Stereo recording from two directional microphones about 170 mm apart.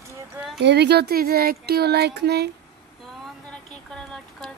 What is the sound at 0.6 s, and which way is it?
Speech, 75° right (ahead or behind).